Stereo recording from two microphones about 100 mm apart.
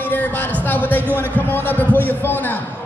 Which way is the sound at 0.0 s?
15° left (ahead or behind).